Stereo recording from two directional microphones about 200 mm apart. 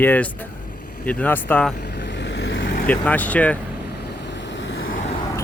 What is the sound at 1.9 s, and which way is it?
Vehicle, 60° left (ahead or behind).